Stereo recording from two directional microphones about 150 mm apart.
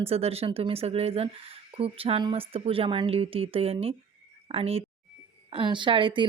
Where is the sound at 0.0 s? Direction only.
40° right (ahead or behind).